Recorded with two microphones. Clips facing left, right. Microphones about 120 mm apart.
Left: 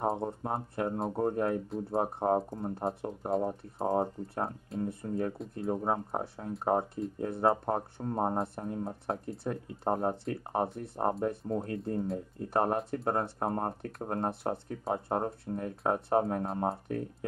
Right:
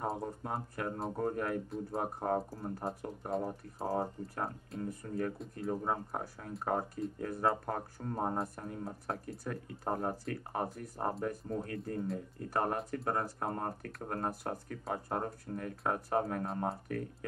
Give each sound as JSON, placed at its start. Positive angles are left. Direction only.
{"t": 0.0, "sound": "speech", "side_deg": 25}
{"t": 4.7, "sound": "speech", "side_deg": 0}
{"t": 5.0, "sound": "speech", "side_deg": 30}